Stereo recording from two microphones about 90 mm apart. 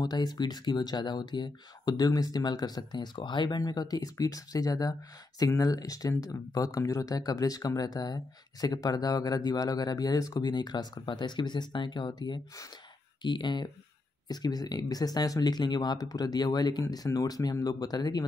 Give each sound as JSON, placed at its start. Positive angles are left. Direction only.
{"t": 0.0, "sound": "speech", "side_deg": 50}